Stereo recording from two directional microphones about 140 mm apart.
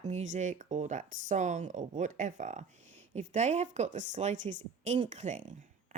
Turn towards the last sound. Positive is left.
turn(degrees=-60)  # may be behind; listen again after turning